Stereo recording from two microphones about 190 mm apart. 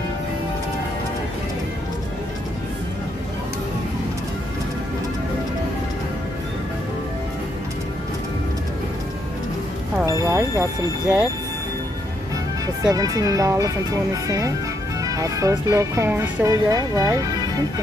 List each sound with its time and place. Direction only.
10.0 s music: 15° right (ahead or behind)
11.1 s speech: 5° right (ahead or behind)
12.9 s speech: 20° right (ahead or behind)